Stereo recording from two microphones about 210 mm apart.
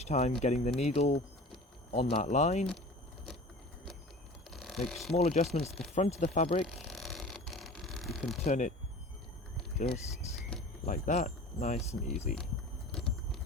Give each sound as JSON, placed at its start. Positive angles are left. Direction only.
{"t": 0.0, "sound": "speech", "side_deg": 30}
{"t": 4.5, "sound": "mechanisms", "side_deg": 0}
{"t": 5.1, "sound": "speech", "side_deg": 30}
{"t": 6.7, "sound": "a sound", "side_deg": 0}
{"t": 8.4, "sound": "speech", "side_deg": 35}
{"t": 10.8, "sound": "speech", "side_deg": 35}